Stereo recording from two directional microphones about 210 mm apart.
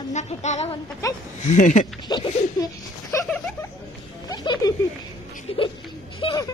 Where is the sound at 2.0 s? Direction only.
20° left (ahead or behind).